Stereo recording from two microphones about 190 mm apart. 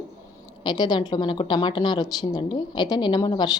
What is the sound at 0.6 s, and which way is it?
A woman's voice, 20° left (ahead or behind).